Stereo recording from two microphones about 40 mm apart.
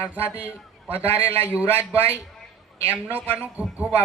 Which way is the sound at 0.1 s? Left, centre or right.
Right.